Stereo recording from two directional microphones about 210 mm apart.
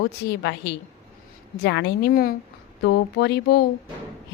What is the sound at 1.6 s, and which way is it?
A woman's voice, 55° left (ahead or behind).